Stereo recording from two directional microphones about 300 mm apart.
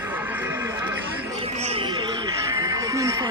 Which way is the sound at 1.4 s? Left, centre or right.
Right.